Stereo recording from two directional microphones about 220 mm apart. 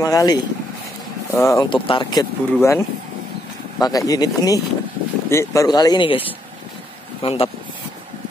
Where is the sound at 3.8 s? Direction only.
15° left (ahead or behind).